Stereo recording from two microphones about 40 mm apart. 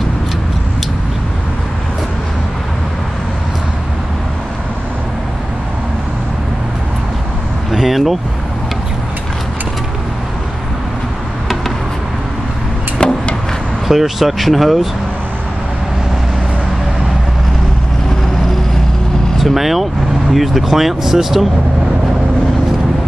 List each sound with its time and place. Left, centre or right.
7.7 s vehicle: centre
13.0 s chop: left
13.8 s speech: centre
19.3 s speech: centre